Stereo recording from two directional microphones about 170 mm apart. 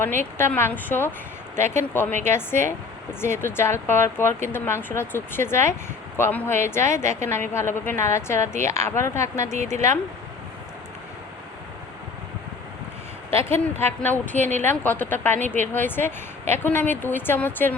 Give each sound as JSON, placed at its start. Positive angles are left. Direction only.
{"t": 0.0, "sound": "speech", "side_deg": 15}
{"t": 13.3, "sound": "speech", "side_deg": 15}